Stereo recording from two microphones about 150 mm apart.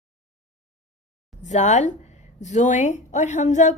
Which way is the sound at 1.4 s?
55° left (ahead or behind).